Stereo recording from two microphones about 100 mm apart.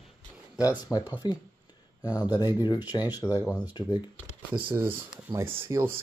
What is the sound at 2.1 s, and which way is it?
Speech, 45° left (ahead or behind).